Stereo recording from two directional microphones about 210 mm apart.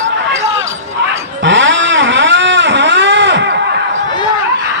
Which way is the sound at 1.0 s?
60° right (ahead or behind).